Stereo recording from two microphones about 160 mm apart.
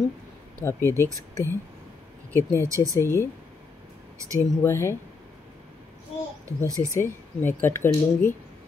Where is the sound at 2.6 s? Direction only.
20° right (ahead or behind).